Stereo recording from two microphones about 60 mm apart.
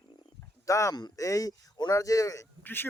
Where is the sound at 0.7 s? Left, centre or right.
Left.